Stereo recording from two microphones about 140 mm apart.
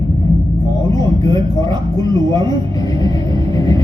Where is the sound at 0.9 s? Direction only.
25° left (ahead or behind).